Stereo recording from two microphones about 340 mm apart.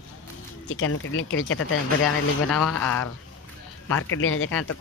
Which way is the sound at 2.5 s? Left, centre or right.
Centre.